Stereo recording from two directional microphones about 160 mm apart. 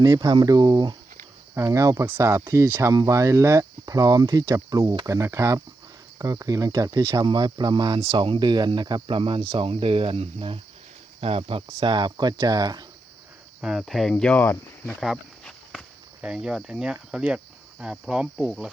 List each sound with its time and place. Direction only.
0.0 s speech: 25° right (ahead or behind)
13.6 s cricket: 5° right (ahead or behind); by 14.9 s 15° left (ahead or behind)
15.0 s walk: centre (ahead or behind)
16.2 s cricket: 5° right (ahead or behind)